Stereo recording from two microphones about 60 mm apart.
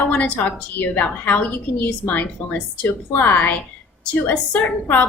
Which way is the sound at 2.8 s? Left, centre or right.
Left.